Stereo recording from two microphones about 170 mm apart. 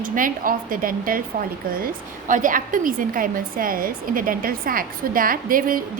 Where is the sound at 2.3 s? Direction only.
50° right (ahead or behind).